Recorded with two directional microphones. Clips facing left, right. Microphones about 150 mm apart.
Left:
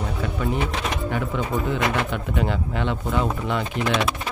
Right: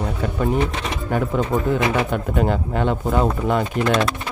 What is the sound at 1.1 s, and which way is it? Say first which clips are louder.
Speech: right 8 dB; 45° right (ahead or behind).